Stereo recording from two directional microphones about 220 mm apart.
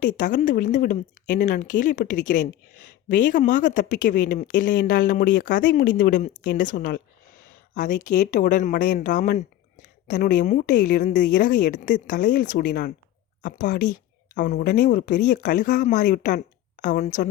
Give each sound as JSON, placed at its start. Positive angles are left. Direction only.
{"t": 0.0, "sound": "speech", "side_deg": 35}